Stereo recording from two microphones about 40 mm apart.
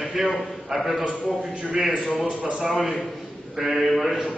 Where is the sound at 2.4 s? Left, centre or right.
Right.